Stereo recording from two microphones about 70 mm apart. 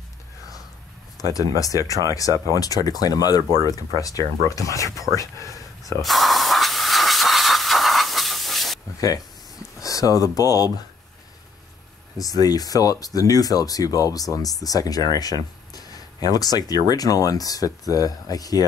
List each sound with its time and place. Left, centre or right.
1.1 s speech: left
6.0 s steam: centre
9.8 s speech: left
12.2 s speech: left